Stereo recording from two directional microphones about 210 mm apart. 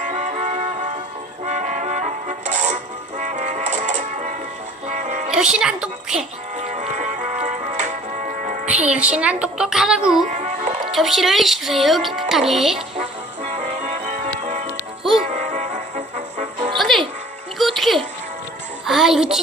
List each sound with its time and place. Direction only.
0.0 s music: 35° right (ahead or behind)
5.3 s a woman's voice: 5° right (ahead or behind)
6.6 s music: 35° right (ahead or behind)
8.6 s speech: 5° right (ahead or behind)
10.2 s music: 35° right (ahead or behind)
10.9 s speech: centre (ahead or behind)
13.0 s music: 30° right (ahead or behind)
16.7 s music: centre (ahead or behind)